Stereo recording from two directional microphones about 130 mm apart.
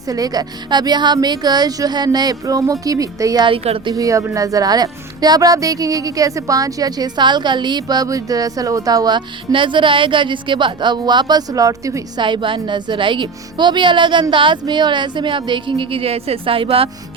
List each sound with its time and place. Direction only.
0.1 s speech: 30° right (ahead or behind)
3.4 s speech: 45° right (ahead or behind)
3.9 s speech: 25° right (ahead or behind)
12.2 s speech: 40° right (ahead or behind)